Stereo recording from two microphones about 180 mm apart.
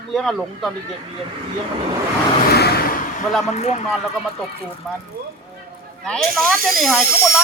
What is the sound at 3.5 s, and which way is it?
Speech, 40° left (ahead or behind).